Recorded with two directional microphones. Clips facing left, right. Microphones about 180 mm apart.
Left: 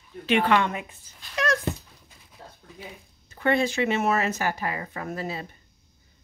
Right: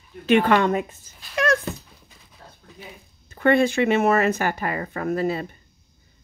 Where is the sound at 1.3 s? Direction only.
55° right (ahead or behind).